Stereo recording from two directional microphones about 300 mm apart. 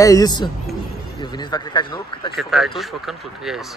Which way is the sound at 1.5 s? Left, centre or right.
Centre.